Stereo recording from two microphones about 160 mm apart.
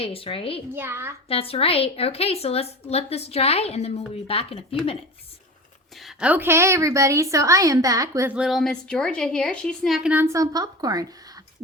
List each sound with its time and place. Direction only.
0.0 s a woman's voice: 35° left (ahead or behind)
0.7 s a child's voice: 15° right (ahead or behind)
1.3 s a woman's voice: 35° left (ahead or behind)
6.0 s a woman's voice: 5° right (ahead or behind); by 8.3 s 20° right (ahead or behind)
8.3 s a woman's voice: 5° right (ahead or behind); by 11.4 s 25° right (ahead or behind)